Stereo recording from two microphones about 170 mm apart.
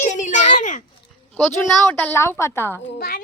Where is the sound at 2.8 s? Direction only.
70° left (ahead or behind).